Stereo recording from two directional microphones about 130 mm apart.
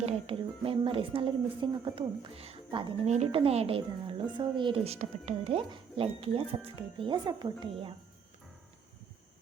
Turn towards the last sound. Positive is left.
turn(degrees=-35)  # may be behind; listen again after turning